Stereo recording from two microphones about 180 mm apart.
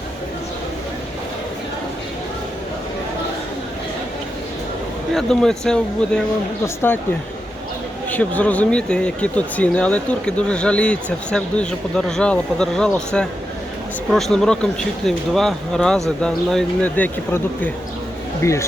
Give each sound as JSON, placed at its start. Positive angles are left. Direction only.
{"t": 5.1, "sound": "speech", "side_deg": 5}
{"t": 8.1, "sound": "speech", "side_deg": 10}